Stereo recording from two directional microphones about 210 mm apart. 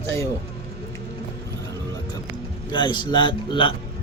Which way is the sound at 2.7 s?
20° left (ahead or behind).